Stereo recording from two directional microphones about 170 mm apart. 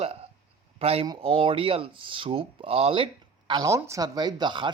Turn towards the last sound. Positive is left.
turn(degrees=-25)  # may be behind; listen again after turning